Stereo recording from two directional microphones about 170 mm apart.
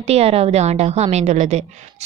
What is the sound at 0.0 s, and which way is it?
A woman's voice, 35° right (ahead or behind).